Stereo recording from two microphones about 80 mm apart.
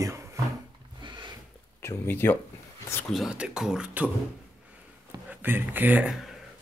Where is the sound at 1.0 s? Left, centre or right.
Right.